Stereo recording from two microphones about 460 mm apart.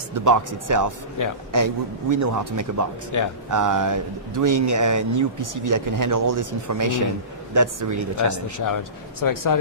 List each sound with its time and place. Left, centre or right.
0.1 s speech: right
1.2 s speech: left
1.5 s speech: right
3.1 s speech: left
3.5 s speech: right
8.5 s speech: left